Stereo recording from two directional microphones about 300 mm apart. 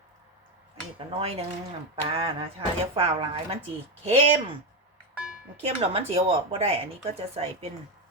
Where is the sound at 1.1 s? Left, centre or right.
Centre.